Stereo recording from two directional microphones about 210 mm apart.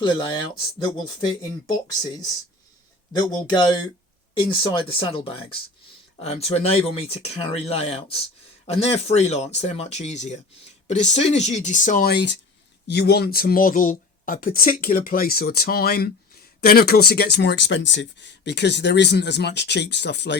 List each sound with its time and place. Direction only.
0.0 s speech: 25° left (ahead or behind); by 20.3 s 55° left (ahead or behind)